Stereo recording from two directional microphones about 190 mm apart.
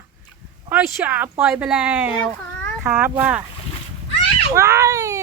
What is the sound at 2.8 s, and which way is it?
Speech, 10° right (ahead or behind).